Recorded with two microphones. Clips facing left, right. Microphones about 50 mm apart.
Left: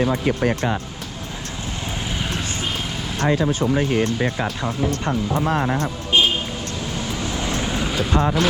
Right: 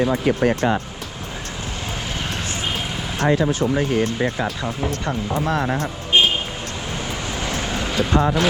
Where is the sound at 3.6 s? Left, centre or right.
Left.